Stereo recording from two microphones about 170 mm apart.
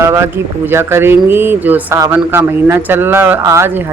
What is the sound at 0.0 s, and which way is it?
Speech, 15° right (ahead or behind).